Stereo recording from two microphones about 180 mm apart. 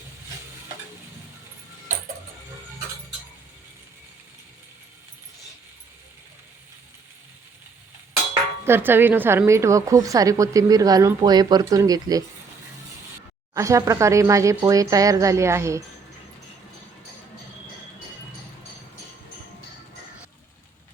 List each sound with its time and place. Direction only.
8.3 s speech: 15° right (ahead or behind)
13.5 s speech: 15° right (ahead or behind)